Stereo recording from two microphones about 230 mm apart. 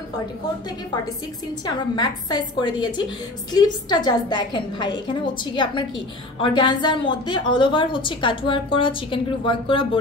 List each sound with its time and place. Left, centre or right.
2.0 s a woman's voice: centre